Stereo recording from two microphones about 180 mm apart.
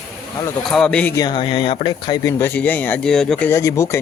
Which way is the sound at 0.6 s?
5° left (ahead or behind).